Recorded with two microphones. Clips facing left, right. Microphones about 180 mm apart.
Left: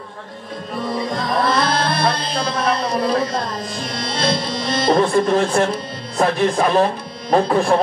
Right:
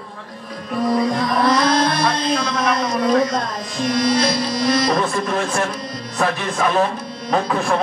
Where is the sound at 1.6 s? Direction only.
60° left (ahead or behind).